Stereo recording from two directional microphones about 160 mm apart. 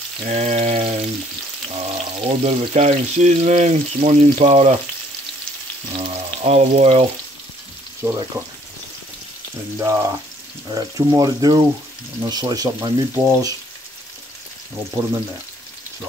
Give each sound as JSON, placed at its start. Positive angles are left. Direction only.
{"t": 0.2, "sound": "speech", "side_deg": -45}
{"t": 5.9, "sound": "frying", "side_deg": -35}
{"t": 8.0, "sound": "frying", "side_deg": -20}
{"t": 9.8, "sound": "frying", "side_deg": -15}
{"t": 10.7, "sound": "speech", "side_deg": -25}